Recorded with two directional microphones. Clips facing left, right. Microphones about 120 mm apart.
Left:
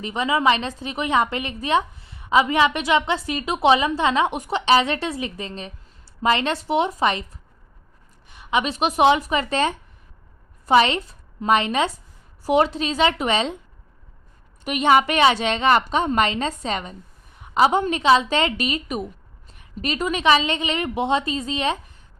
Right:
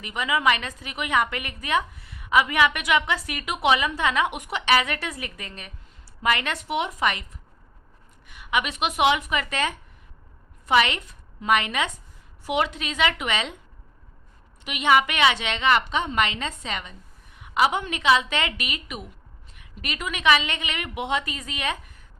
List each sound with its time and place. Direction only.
0.0 s a woman's voice: 30° left (ahead or behind)
8.3 s a woman's voice: 30° left (ahead or behind)
14.6 s a woman's voice: 40° left (ahead or behind)